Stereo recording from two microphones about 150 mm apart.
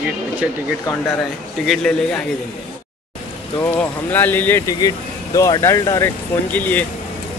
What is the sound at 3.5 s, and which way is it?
Speech, 15° left (ahead or behind).